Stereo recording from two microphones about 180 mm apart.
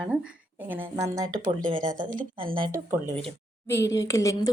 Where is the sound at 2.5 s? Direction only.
25° right (ahead or behind).